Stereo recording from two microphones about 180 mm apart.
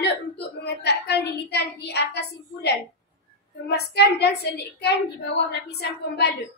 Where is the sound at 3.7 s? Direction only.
65° left (ahead or behind).